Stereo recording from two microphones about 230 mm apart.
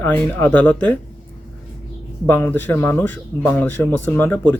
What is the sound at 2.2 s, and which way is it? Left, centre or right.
Speech, centre.